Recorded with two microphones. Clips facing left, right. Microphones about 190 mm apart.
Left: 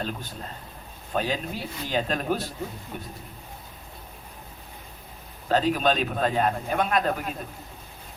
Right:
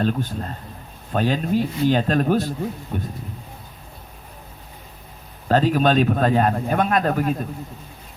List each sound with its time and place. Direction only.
0.0 s a man's voice: 50° right (ahead or behind)
5.5 s a man's voice: 45° right (ahead or behind)